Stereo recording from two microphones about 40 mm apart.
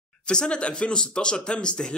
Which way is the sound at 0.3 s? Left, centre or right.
Left.